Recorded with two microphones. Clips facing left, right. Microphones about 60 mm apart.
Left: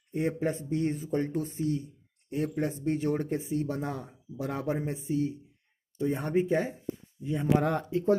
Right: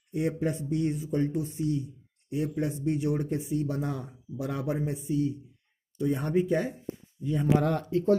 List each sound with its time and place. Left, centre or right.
0.1 s speech: left
7.5 s speech: centre